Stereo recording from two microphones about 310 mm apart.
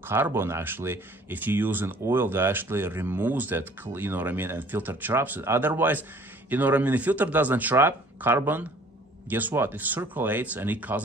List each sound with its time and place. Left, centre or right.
0.0 s speech: centre